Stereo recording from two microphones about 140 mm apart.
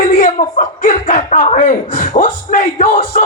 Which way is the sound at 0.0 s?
70° left (ahead or behind).